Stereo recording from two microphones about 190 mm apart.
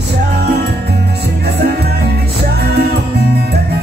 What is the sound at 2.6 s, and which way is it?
Music, 55° right (ahead or behind).